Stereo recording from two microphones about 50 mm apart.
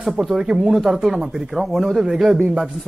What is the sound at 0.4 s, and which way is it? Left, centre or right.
Speech, centre.